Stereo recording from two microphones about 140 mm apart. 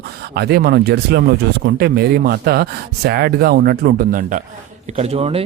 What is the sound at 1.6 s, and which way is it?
Speech, 90° right.